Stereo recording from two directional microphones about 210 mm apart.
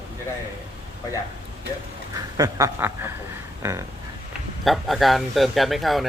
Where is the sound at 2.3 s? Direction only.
15° right (ahead or behind).